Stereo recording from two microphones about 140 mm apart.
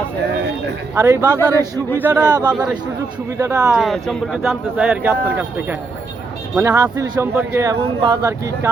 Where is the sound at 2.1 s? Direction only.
30° right (ahead or behind).